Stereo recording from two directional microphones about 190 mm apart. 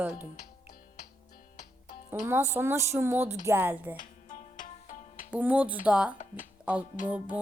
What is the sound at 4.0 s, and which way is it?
Music, 45° left (ahead or behind).